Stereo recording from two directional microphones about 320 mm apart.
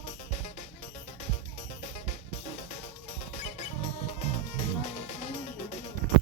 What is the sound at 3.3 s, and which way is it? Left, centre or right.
Music, centre.